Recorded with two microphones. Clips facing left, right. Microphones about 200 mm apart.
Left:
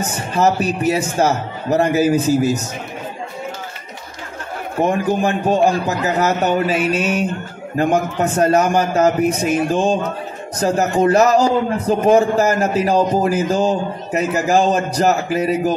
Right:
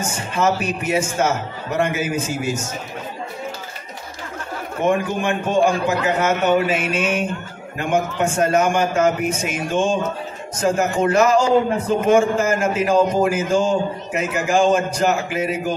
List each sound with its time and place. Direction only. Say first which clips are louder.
0.0 s a man's voice: left 3 dB; 35° left (ahead or behind)
4.8 s a man's voice: left 1 dB; 35° left (ahead or behind)